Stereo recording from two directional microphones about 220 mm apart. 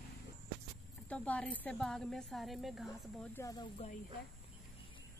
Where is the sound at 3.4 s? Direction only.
15° left (ahead or behind).